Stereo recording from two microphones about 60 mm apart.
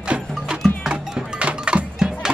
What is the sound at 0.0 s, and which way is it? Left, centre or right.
Music, centre.